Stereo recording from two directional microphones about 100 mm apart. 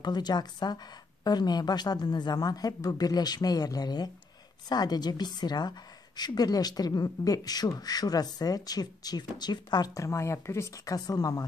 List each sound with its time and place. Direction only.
0.0 s a woman's voice: 45° left (ahead or behind)